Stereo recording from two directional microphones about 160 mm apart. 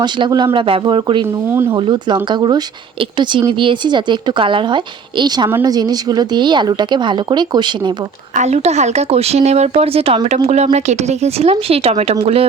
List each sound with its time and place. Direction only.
0.0 s speech: 30° right (ahead or behind)
1.5 s speech: 15° right (ahead or behind)
1.7 s speech: 30° right (ahead or behind)
8.4 s speech: 45° right (ahead or behind)